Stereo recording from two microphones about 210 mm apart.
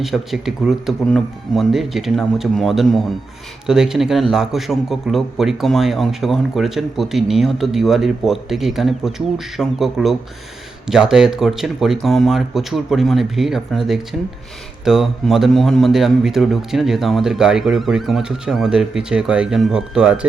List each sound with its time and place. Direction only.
0.0 s a man's voice: centre (ahead or behind)